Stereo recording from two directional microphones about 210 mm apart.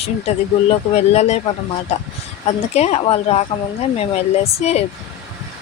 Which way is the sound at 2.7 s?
30° left (ahead or behind).